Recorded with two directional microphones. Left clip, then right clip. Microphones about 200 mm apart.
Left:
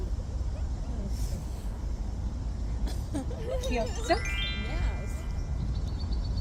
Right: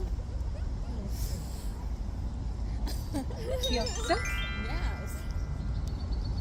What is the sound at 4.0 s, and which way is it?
Music, 5° right (ahead or behind).